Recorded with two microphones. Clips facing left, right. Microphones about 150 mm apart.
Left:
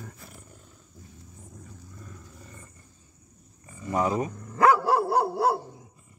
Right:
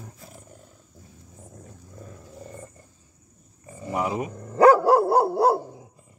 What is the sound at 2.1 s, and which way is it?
Roar, 35° right (ahead or behind).